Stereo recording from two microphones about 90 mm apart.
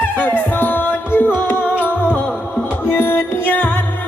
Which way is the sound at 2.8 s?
25° left (ahead or behind).